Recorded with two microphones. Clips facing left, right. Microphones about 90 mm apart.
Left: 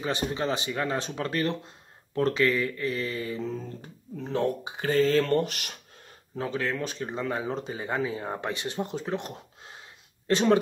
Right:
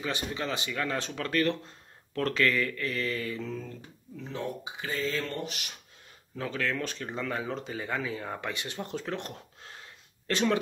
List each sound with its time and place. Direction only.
0.0 s speech: 30° left (ahead or behind)
4.2 s speech: 50° left (ahead or behind)
6.3 s speech: 25° left (ahead or behind)